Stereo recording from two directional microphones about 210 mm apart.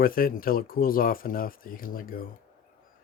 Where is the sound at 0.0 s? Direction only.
45° left (ahead or behind).